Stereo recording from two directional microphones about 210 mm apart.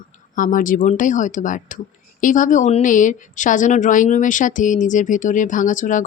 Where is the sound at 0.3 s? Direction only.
40° left (ahead or behind).